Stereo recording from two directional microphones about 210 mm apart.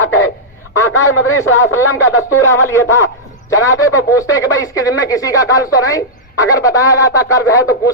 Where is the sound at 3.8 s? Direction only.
15° left (ahead or behind).